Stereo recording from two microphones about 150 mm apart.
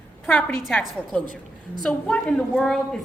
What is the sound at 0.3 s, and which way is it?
A woman's voice, 10° left (ahead or behind).